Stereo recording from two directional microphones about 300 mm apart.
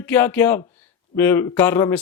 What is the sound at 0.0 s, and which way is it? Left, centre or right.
Speech, centre.